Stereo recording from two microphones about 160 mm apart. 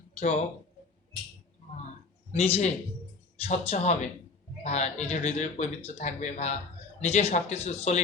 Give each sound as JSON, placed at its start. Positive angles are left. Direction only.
{"t": 0.2, "sound": "speech", "side_deg": 45}
{"t": 2.3, "sound": "speech", "side_deg": 40}